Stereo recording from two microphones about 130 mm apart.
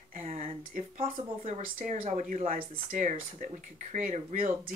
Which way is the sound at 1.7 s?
90° right.